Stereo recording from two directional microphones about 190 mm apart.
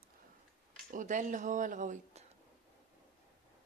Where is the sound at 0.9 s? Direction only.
40° right (ahead or behind).